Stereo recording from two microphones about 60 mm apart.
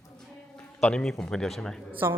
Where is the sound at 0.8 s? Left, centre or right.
Centre.